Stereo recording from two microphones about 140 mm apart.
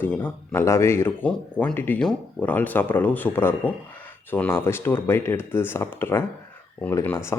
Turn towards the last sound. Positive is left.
turn(degrees=15)  # may be behind; listen again after turning